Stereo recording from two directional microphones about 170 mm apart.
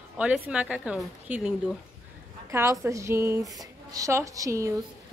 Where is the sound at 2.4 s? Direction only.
15° right (ahead or behind).